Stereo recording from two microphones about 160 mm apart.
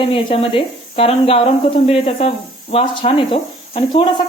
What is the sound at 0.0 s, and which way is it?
Speech, 35° left (ahead or behind).